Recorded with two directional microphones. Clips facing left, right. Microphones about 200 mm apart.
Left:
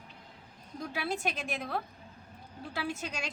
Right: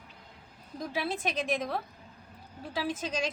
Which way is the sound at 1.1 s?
20° right (ahead or behind).